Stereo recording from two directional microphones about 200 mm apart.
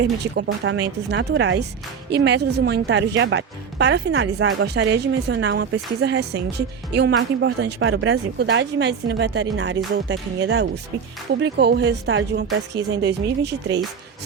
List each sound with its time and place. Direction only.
0.6 s speech: 60° right (ahead or behind)